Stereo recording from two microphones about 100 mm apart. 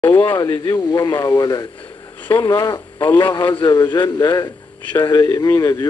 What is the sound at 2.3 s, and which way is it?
Speech, 50° left (ahead or behind).